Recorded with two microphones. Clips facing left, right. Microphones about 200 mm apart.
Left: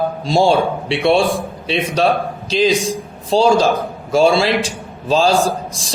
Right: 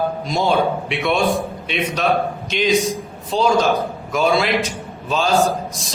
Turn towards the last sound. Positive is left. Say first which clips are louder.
# even
turn(degrees=30)  # may be behind; listen again after turning